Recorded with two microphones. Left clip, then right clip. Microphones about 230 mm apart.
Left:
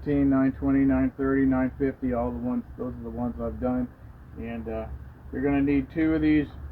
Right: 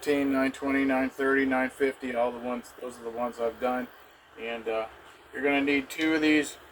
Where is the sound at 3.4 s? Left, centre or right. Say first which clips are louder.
Even; centre.